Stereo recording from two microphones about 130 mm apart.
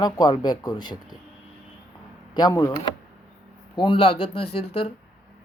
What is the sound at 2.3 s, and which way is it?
Speech, 30° left (ahead or behind).